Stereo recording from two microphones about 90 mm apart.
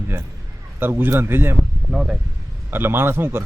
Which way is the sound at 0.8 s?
25° right (ahead or behind).